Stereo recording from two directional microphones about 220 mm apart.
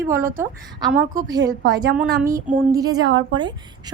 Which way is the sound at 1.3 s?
15° right (ahead or behind).